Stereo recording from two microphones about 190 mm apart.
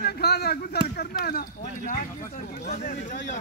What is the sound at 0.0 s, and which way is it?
Speech, 55° left (ahead or behind).